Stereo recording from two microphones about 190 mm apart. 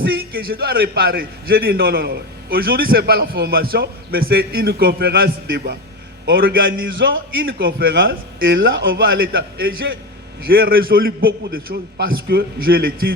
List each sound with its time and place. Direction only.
0.0 s a man's voice: 55° right (ahead or behind)
8.4 s speech: 85° right
8.9 s a man's voice: 50° right (ahead or behind)